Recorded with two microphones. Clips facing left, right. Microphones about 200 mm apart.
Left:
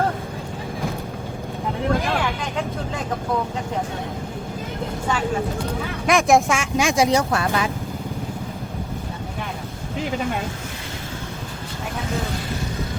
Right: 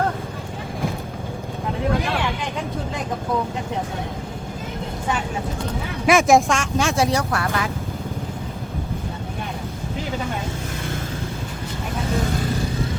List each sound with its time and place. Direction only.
6.1 s speech: centre (ahead or behind)
6.5 s speech: 10° left (ahead or behind)